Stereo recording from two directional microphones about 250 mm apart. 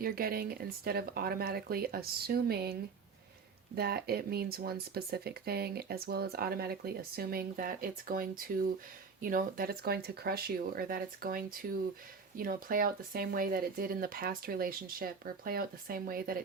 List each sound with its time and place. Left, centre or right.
0.0 s speech: right
3.8 s speech: right